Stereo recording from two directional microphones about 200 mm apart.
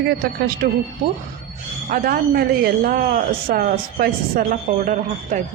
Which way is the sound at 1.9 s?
50° right (ahead or behind).